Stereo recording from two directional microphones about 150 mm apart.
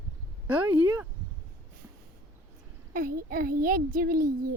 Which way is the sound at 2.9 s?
75° right (ahead or behind).